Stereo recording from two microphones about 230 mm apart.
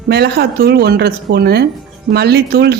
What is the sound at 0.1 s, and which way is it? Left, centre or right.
Speech, right.